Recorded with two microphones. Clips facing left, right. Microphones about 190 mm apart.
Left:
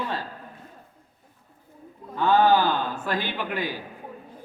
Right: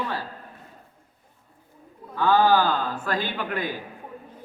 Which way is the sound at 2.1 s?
20° left (ahead or behind).